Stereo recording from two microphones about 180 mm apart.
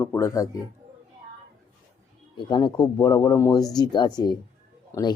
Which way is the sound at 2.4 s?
25° left (ahead or behind).